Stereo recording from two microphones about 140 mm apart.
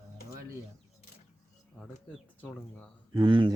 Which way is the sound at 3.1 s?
35° right (ahead or behind).